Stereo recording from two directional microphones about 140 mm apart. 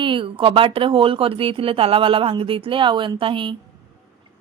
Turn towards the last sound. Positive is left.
turn(degrees=-35)  # may be behind; listen again after turning